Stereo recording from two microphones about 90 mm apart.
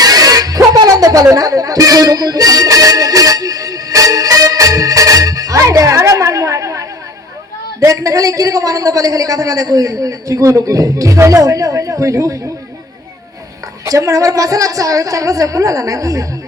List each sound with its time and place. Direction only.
0.0 s music: 45° right (ahead or behind)
7.9 s a woman's voice: 40° right (ahead or behind)
13.8 s a woman's voice: 40° right (ahead or behind)